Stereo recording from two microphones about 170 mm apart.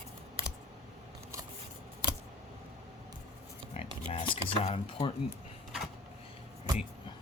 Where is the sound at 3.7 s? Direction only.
40° left (ahead or behind).